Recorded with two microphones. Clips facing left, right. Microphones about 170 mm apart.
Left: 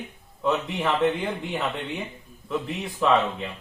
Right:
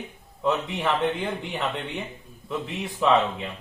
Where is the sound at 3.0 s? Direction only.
Centre (ahead or behind).